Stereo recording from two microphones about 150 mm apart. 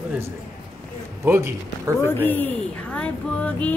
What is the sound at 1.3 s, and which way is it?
Speech, 15° right (ahead or behind).